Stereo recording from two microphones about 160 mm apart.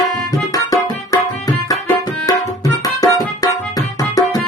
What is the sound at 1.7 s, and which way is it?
Tabla, 20° left (ahead or behind).